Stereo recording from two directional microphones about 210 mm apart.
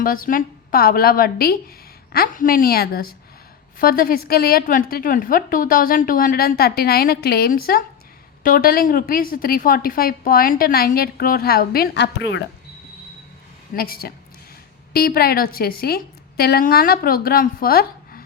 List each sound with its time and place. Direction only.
0.0 s a woman's voice: 40° left (ahead or behind)
13.7 s a woman's voice: 45° left (ahead or behind)